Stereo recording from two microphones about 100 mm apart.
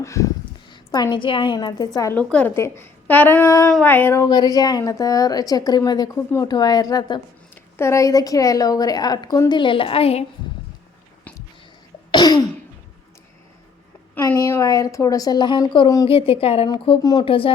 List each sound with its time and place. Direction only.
0.0 s a woman's voice: 30° left (ahead or behind)
0.7 s a woman's voice: 40° left (ahead or behind)
1.5 s a woman's voice: 40° left (ahead or behind)
2.1 s a woman's voice: 15° left (ahead or behind)
2.6 s speech: 25° left (ahead or behind)
4.3 s a woman's voice: 40° left (ahead or behind)
7.5 s a woman's voice: 25° left (ahead or behind); by 9.4 s 45° left (ahead or behind)
9.5 s a woman's voice: 55° left (ahead or behind); by 10.2 s 85° left
12.1 s cough: 45° left (ahead or behind)
14.2 s a woman's voice: 25° left (ahead or behind); by 15.6 s 50° left (ahead or behind)
16.0 s a woman's voice: 70° left (ahead or behind)
16.6 s a woman's voice: 55° left (ahead or behind)
17.0 s a woman's voice: 40° left (ahead or behind)
17.2 s a woman's voice: 65° left (ahead or behind)